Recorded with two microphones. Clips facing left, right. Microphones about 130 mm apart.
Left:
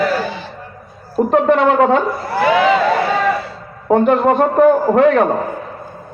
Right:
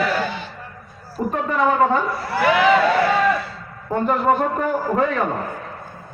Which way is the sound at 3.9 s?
80° left.